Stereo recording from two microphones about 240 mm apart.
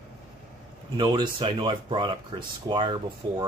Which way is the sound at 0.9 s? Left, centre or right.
Centre.